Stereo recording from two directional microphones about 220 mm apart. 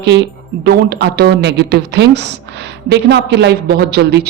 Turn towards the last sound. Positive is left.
turn(degrees=-50)  # may be behind; listen again after turning